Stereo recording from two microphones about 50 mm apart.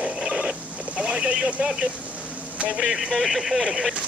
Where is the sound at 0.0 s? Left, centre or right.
Centre.